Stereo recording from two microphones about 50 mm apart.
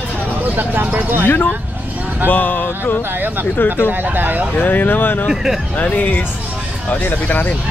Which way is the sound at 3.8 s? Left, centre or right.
Right.